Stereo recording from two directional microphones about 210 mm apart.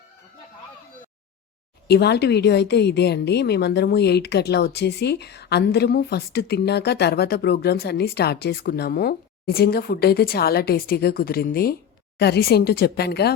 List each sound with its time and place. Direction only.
1.9 s a woman's voice: 50° left (ahead or behind)